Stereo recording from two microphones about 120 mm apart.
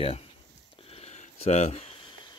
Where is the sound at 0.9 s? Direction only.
65° left (ahead or behind).